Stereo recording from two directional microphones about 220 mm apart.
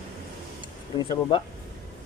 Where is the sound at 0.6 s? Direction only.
20° left (ahead or behind).